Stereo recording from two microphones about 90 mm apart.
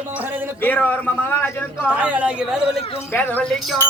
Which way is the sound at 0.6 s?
20° left (ahead or behind).